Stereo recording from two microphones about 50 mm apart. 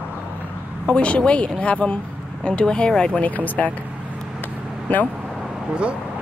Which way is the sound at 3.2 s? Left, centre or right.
Left.